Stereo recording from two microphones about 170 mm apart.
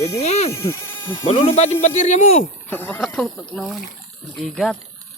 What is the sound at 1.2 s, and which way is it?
Speech, 30° left (ahead or behind).